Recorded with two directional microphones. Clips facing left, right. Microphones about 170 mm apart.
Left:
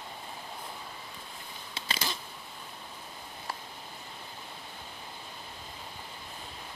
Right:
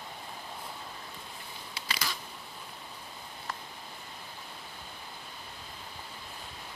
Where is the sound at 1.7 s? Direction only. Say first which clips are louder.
Left 2 dB; 25° left (ahead or behind).